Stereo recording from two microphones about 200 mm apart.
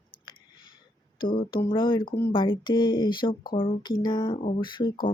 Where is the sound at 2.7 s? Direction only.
20° left (ahead or behind).